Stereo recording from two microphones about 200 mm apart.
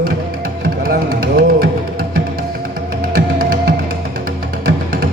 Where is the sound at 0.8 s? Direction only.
50° right (ahead or behind).